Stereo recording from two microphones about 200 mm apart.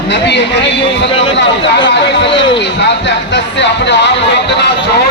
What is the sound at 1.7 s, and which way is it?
Speech, 60° left (ahead or behind).